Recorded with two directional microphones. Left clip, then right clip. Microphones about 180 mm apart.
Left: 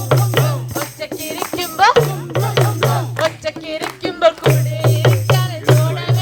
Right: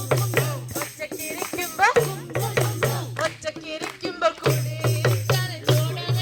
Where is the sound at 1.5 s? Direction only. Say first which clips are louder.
Left 7 dB; 60° right (ahead or behind).